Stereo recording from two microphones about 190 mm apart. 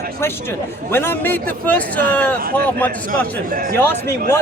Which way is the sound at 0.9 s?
10° left (ahead or behind).